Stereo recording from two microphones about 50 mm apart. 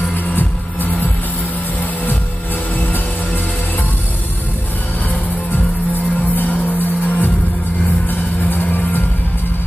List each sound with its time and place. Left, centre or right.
0.4 s music: left
6.3 s music: left